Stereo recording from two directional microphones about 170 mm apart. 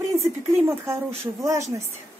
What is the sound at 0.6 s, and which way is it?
A woman's voice, 15° right (ahead or behind).